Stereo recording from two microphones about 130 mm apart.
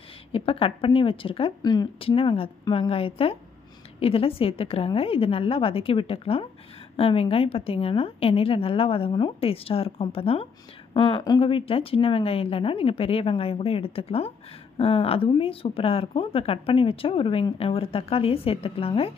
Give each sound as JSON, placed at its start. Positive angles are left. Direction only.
{"t": 0.3, "sound": "a woman's voice", "side_deg": 45}
{"t": 1.6, "sound": "speech", "side_deg": 30}
{"t": 2.0, "sound": "a woman's voice", "side_deg": 45}